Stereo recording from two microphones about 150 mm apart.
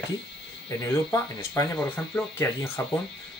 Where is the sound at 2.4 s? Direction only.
20° left (ahead or behind).